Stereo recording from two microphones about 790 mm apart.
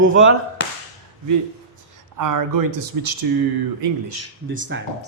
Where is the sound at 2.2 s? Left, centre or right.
Right.